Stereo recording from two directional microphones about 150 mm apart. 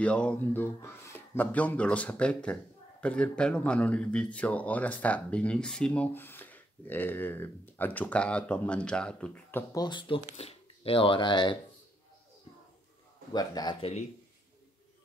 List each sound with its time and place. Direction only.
0.0 s speech: 10° left (ahead or behind)
9.8 s speech: 30° left (ahead or behind)
13.3 s speech: 25° left (ahead or behind)
13.7 s speech: 40° left (ahead or behind)